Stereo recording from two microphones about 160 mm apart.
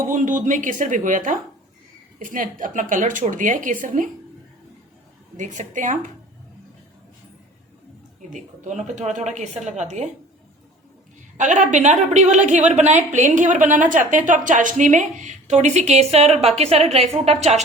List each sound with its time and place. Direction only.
0.0 s a woman's voice: 55° right (ahead or behind)
5.4 s a woman's voice: 50° right (ahead or behind)
8.3 s a woman's voice: 50° right (ahead or behind)
11.3 s a woman's voice: 50° right (ahead or behind)